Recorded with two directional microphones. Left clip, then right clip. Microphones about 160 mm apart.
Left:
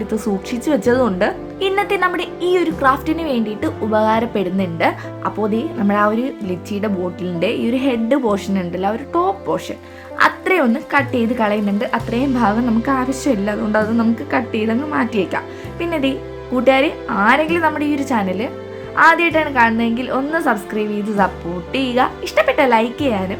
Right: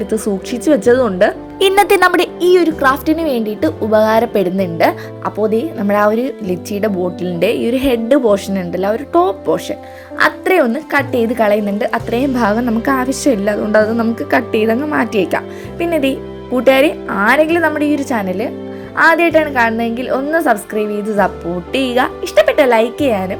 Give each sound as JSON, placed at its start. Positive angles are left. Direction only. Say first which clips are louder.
{"t": 0.1, "sound": "a woman's voice", "louder": "right 4 dB", "side_deg": -30}
{"t": 1.5, "sound": "a woman's voice", "louder": "right 8 dB", "side_deg": -50}
{"t": 2.5, "sound": "a woman's voice", "louder": "right 3 dB", "side_deg": -30}